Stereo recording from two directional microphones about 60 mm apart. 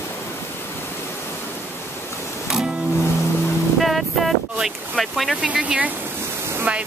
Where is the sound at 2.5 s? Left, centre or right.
Centre.